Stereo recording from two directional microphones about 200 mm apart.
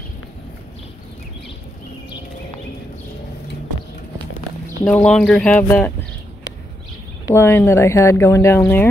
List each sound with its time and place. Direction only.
4.8 s speech: 5° left (ahead or behind)
7.2 s speech: 10° left (ahead or behind)